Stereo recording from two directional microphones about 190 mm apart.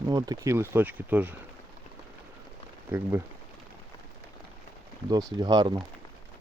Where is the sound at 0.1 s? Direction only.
20° right (ahead or behind).